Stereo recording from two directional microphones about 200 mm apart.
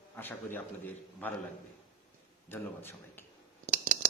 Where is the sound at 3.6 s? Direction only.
45° right (ahead or behind).